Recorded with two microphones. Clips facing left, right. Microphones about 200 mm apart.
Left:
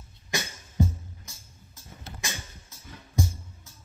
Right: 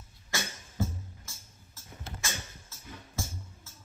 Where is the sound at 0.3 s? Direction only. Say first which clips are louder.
Left 3 dB; 15° left (ahead or behind).